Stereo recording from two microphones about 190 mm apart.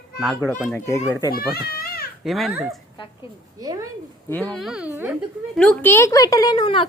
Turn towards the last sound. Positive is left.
turn(degrees=25)  # may be behind; listen again after turning